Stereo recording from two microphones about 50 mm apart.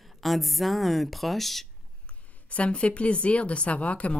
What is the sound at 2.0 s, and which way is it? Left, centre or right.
A woman's voice, left.